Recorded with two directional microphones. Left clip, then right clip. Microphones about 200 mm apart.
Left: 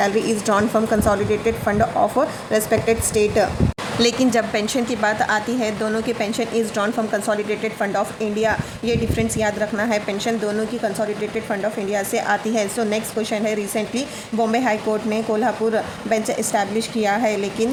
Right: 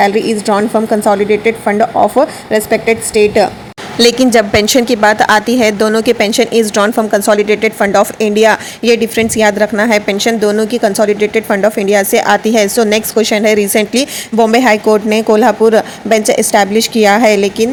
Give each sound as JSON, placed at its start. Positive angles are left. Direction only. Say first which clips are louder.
{"t": 0.0, "sound": "a woman's voice", "louder": "right 8 dB", "side_deg": -15}